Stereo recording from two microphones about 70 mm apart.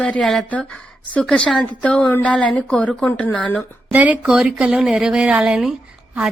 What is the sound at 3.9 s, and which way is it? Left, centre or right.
Speech, centre.